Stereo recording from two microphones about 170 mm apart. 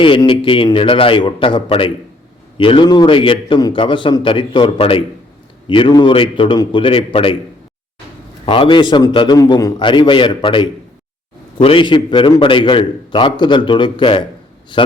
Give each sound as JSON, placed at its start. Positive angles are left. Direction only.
{"t": 0.0, "sound": "a man's voice", "side_deg": 30}
{"t": 8.4, "sound": "a man's voice", "side_deg": 30}